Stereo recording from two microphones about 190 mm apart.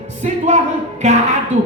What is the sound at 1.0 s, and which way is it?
Speech, 35° right (ahead or behind).